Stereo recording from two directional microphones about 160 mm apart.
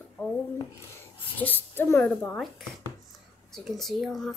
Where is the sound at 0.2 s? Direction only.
15° left (ahead or behind).